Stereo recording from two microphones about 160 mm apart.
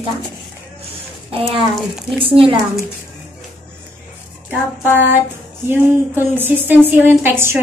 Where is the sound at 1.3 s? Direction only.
35° right (ahead or behind).